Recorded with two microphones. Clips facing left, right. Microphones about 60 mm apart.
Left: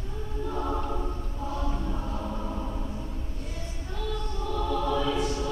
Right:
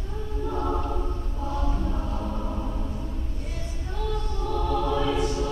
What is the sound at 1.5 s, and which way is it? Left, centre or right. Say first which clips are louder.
Music: right 3 dB; centre.